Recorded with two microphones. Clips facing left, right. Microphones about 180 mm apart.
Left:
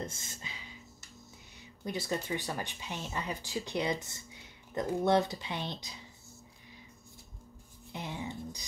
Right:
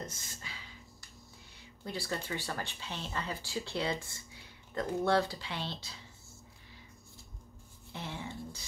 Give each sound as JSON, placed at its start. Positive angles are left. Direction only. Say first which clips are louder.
{"t": 0.0, "sound": "music", "louder": "left 3 dB", "side_deg": 25}
{"t": 1.9, "sound": "speech", "louder": "left 3 dB", "side_deg": 20}
{"t": 7.9, "sound": "speech", "louder": "left 2 dB", "side_deg": 15}